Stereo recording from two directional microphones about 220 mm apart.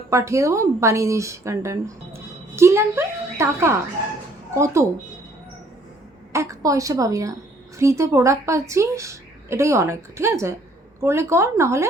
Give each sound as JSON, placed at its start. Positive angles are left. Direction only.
{"t": 0.1, "sound": "a woman's voice", "side_deg": -15}
{"t": 6.3, "sound": "a woman's voice", "side_deg": -15}